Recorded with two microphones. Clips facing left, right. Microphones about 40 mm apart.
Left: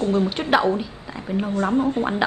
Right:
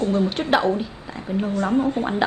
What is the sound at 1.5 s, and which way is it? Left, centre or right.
Speech, left.